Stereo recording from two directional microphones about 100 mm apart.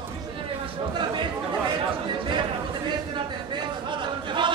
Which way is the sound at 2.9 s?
50° right (ahead or behind).